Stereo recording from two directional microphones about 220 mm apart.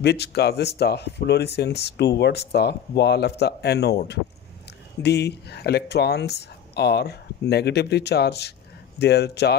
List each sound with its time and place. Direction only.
0.0 s speech: 50° left (ahead or behind)